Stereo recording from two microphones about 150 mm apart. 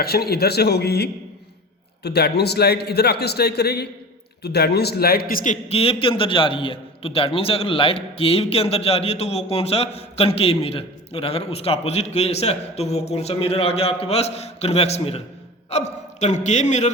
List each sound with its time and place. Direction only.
0.0 s a man's voice: 90° left; by 5.5 s 75° left (ahead or behind)
5.6 s a man's voice: 40° left (ahead or behind)